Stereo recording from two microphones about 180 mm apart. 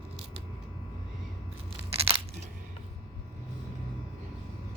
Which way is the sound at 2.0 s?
30° right (ahead or behind).